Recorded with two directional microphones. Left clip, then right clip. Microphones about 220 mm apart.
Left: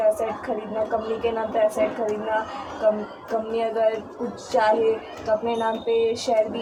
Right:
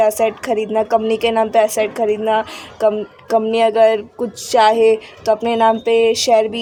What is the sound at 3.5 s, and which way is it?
Speech, 50° right (ahead or behind).